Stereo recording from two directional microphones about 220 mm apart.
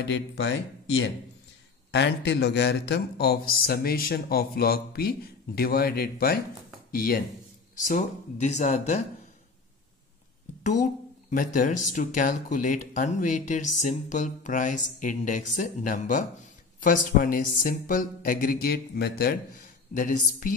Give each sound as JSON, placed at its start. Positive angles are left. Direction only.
{"t": 0.0, "sound": "speech", "side_deg": 55}
{"t": 10.6, "sound": "speech", "side_deg": 35}